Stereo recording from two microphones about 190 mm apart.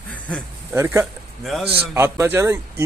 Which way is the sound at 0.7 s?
15° right (ahead or behind).